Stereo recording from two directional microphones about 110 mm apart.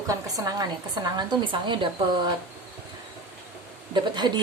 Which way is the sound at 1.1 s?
45° right (ahead or behind).